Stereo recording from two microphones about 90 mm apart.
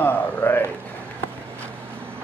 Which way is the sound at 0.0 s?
25° left (ahead or behind).